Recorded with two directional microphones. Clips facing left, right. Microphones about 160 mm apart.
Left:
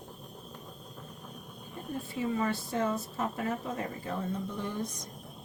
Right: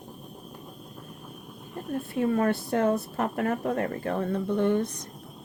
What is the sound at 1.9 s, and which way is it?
A woman's voice, 60° right (ahead or behind).